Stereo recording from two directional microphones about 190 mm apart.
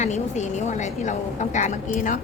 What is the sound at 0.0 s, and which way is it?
A woman's voice, 35° left (ahead or behind).